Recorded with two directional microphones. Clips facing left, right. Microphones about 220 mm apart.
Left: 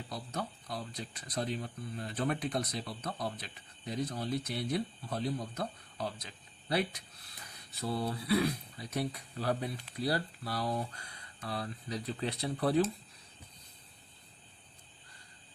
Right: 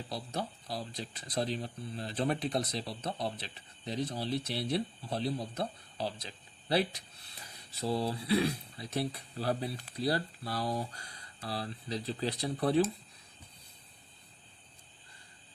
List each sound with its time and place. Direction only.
0.1 s speech: 30° right (ahead or behind)